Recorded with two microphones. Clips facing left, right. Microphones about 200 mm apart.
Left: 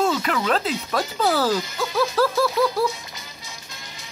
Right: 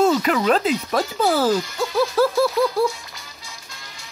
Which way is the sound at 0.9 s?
Centre (ahead or behind).